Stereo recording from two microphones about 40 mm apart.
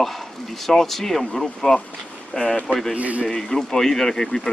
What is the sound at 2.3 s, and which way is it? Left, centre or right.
Speech, left.